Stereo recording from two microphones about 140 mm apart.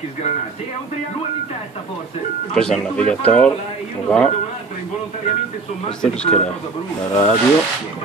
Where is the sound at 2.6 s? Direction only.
5° left (ahead or behind).